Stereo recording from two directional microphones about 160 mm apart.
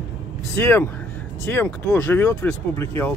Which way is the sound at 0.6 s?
10° left (ahead or behind).